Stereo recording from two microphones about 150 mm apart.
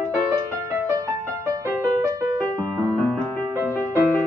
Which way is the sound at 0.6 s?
20° right (ahead or behind).